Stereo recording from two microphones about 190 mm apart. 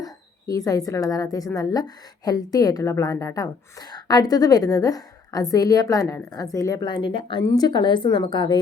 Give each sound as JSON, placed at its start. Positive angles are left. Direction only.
{"t": 0.0, "sound": "a woman's voice", "side_deg": 20}